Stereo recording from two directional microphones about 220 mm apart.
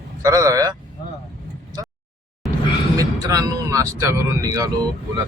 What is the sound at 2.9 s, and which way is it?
Speech, 15° right (ahead or behind).